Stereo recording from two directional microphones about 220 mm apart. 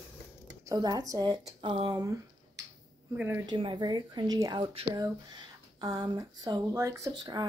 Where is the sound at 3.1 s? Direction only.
10° right (ahead or behind).